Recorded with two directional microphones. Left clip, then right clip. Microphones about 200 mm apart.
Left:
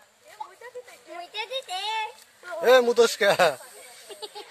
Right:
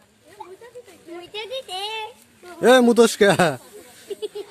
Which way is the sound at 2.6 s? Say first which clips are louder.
Right 4 dB; 30° right (ahead or behind).